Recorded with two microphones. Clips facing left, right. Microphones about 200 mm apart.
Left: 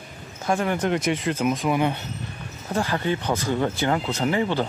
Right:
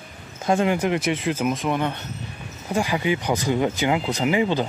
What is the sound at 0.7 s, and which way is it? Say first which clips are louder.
Speech: right 1 dB; 5° right (ahead or behind).